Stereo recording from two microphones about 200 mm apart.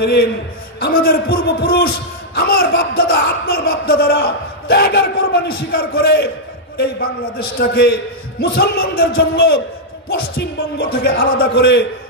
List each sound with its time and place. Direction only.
0.0 s a man's voice: 55° left (ahead or behind)
7.5 s a man's voice: 50° left (ahead or behind)